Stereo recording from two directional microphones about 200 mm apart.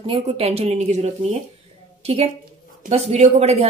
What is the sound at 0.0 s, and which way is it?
A woman's voice, 30° right (ahead or behind).